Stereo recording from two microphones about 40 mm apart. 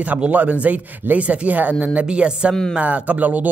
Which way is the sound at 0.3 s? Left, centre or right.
Right.